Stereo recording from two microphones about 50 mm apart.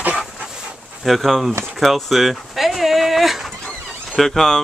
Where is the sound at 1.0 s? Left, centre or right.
Centre.